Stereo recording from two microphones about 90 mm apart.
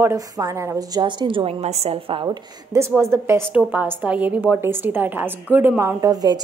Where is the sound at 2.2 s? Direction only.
35° right (ahead or behind).